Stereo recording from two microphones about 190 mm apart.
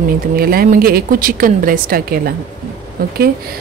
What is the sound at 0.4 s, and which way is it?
Speech, 50° right (ahead or behind).